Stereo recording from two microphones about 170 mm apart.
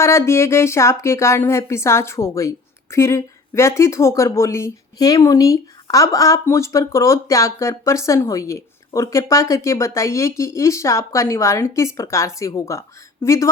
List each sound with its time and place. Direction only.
0.0 s a woman's voice: 15° left (ahead or behind)